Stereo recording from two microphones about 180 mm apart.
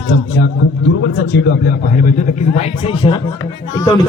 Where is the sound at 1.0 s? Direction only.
70° left (ahead or behind).